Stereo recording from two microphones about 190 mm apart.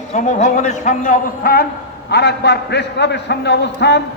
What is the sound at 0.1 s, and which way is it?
A man's voice, 40° left (ahead or behind).